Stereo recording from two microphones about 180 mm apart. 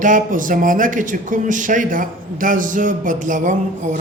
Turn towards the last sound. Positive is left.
turn(degrees=-45)  # may be behind; listen again after turning